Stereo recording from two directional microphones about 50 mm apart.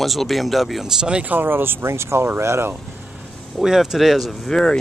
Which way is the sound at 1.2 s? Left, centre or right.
Right.